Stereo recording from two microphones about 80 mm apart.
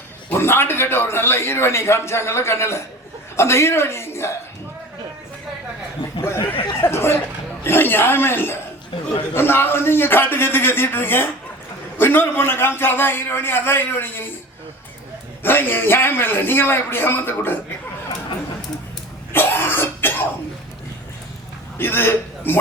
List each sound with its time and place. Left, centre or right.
0.3 s a man's voice: left
6.2 s a sound: left
6.8 s a man's voice: left
15.4 s a man's voice: left
19.3 s cough: left
21.8 s a man's voice: left